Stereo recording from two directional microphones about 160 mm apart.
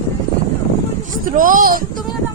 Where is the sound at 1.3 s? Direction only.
60° right (ahead or behind).